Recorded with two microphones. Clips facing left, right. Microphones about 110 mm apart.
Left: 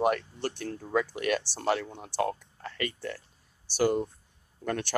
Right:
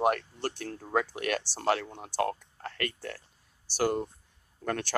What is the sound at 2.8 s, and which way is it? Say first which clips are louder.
Speech: left 2 dB; 55° right (ahead or behind).